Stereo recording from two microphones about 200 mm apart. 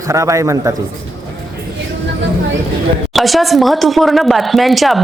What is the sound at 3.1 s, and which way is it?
Speech, centre (ahead or behind).